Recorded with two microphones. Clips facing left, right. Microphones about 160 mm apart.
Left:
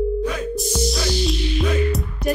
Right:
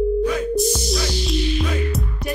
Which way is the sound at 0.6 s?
Centre (ahead or behind).